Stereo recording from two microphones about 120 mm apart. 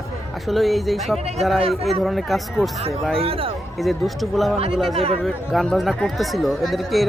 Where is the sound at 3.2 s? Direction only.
50° right (ahead or behind).